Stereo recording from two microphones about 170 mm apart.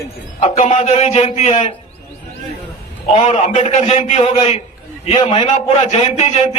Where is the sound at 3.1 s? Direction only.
40° left (ahead or behind).